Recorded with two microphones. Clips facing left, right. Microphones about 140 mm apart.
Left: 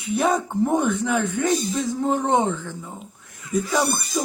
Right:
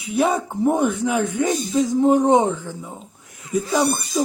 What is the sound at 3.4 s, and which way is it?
Speech, 30° right (ahead or behind).